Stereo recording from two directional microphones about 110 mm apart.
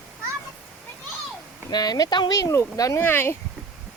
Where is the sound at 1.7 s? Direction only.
35° left (ahead or behind); by 3.3 s 20° left (ahead or behind).